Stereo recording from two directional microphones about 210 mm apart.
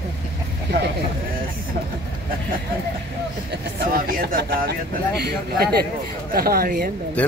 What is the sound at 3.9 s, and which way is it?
Speech, 45° right (ahead or behind).